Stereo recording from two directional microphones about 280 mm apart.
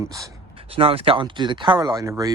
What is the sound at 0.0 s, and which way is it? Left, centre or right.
Speech, centre.